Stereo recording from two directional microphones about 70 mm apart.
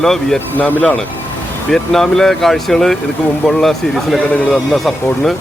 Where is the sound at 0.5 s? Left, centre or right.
Centre.